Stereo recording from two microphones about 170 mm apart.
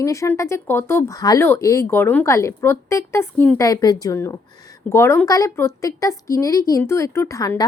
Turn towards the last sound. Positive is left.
turn(degrees=20)  # may be behind; listen again after turning